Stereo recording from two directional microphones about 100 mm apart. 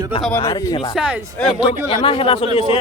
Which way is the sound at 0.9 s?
10° right (ahead or behind).